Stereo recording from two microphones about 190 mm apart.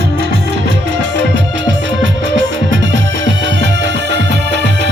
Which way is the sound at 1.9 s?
75° right (ahead or behind).